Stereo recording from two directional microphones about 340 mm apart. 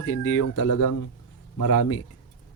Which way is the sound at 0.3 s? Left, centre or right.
Left.